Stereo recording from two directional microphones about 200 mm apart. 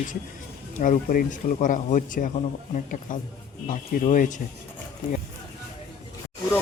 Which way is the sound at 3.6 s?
40° left (ahead or behind).